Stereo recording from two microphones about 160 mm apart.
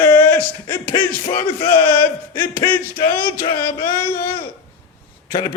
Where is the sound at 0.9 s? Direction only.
35° left (ahead or behind).